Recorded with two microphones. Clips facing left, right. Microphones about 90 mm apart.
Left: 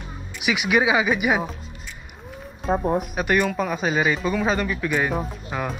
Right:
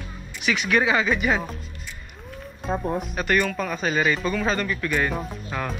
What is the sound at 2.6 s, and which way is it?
Speech, centre (ahead or behind).